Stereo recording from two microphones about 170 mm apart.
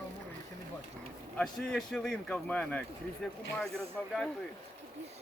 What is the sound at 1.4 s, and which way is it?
Speech, 5° left (ahead or behind).